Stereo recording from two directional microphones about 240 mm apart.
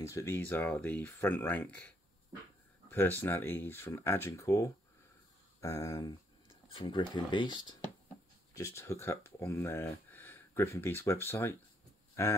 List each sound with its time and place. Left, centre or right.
0.0 s speech: centre